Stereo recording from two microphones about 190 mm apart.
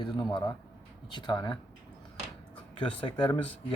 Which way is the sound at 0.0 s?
25° left (ahead or behind).